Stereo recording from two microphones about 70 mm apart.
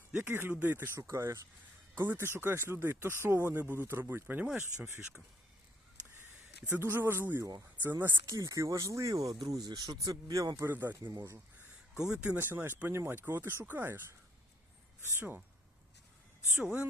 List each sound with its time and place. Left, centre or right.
0.3 s speech: right
0.9 s speech: right
2.0 s speech: right
4.4 s speech: centre
6.7 s speech: right
8.3 s speech: right
10.7 s speech: right
11.0 s speech: right
11.9 s speech: centre
12.4 s speech: right
15.1 s speech: right